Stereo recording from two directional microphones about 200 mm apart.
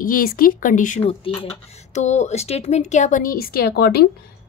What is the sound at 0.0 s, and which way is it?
Speech, 45° left (ahead or behind).